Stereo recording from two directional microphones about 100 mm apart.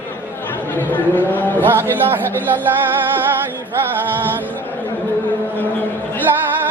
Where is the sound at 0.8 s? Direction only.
20° left (ahead or behind).